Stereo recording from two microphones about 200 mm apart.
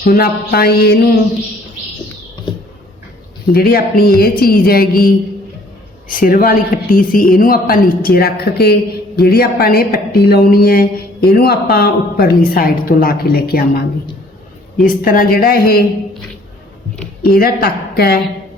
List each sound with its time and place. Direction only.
0.0 s speech: 50° left (ahead or behind)
3.5 s speech: 50° left (ahead or behind)
14.8 s speech: 45° left (ahead or behind)
17.2 s speech: 50° left (ahead or behind)